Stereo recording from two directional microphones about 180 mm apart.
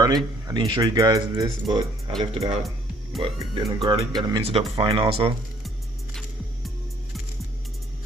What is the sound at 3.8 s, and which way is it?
Speech, 25° right (ahead or behind).